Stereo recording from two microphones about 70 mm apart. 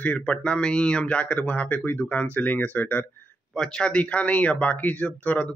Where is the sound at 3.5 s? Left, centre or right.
Centre.